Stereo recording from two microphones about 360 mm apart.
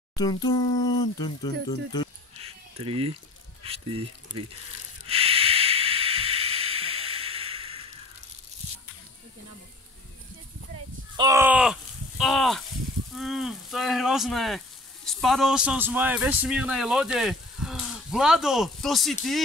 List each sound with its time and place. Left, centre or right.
0.1 s speech: centre
2.4 s a sound: centre
3.6 s speech: centre
5.0 s hiss: centre
11.1 s a sound: centre
13.1 s a man's voice: centre